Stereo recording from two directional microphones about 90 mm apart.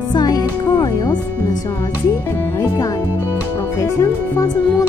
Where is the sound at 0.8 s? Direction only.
40° left (ahead or behind).